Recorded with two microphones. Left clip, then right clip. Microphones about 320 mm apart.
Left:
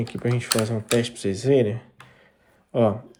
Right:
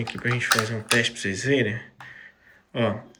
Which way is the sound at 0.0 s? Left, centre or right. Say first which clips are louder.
Right 2 dB; centre.